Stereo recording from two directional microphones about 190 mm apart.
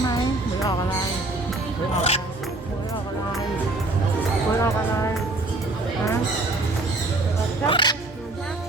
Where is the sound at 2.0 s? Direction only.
35° left (ahead or behind).